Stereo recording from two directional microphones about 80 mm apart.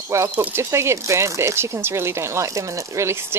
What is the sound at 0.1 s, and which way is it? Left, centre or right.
Speech, right.